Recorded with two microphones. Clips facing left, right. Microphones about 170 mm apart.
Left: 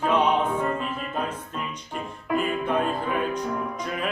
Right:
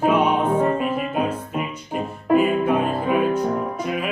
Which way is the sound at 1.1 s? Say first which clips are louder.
Right 6 dB; 10° right (ahead or behind).